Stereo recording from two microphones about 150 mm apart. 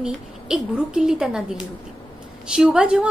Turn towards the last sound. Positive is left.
turn(degrees=-5)  # may be behind; listen again after turning